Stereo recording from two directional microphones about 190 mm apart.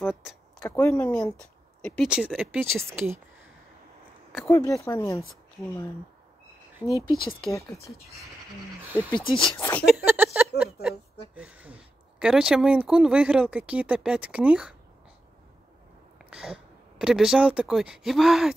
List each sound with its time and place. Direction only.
0.0 s speech: centre (ahead or behind)
2.0 s speech: 5° right (ahead or behind)
4.5 s speech: 15° left (ahead or behind)
6.8 s a woman's voice: 5° right (ahead or behind)
7.4 s speech: 20° left (ahead or behind)
8.8 s speech: 10° right (ahead or behind)
9.6 s speech: 10° left (ahead or behind)
9.8 s a sound: 10° right (ahead or behind)
10.6 s a woman's voice: 5° right (ahead or behind)
16.2 s speech: 5° right (ahead or behind)